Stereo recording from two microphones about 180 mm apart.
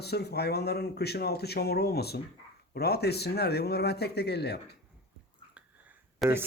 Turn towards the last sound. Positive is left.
turn(degrees=0)  # may be behind; listen again after turning